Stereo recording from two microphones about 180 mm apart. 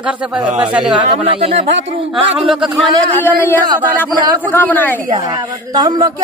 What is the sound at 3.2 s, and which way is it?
Speech, 10° left (ahead or behind).